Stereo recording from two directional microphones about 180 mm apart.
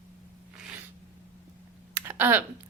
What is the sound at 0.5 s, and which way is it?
Sneeze, 5° right (ahead or behind).